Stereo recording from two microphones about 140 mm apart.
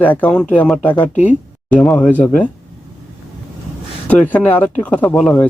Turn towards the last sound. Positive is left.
turn(degrees=10)  # may be behind; listen again after turning